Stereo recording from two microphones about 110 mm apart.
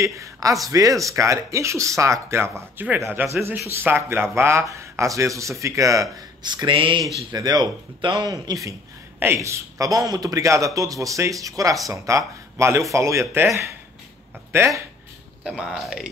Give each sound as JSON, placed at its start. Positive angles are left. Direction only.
{"t": 0.0, "sound": "speech", "side_deg": -30}
{"t": 7.2, "sound": "a man's voice", "side_deg": -35}
{"t": 8.3, "sound": "a man's voice", "side_deg": -30}
{"t": 15.4, "sound": "speech", "side_deg": -5}